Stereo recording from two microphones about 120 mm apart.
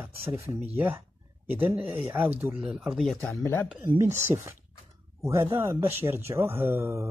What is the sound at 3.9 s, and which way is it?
Speech, 20° right (ahead or behind).